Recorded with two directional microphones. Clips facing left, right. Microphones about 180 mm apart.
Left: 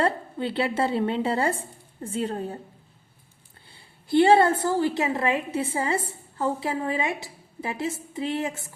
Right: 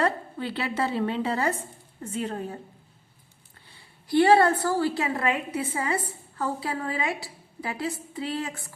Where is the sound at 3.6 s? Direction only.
30° left (ahead or behind).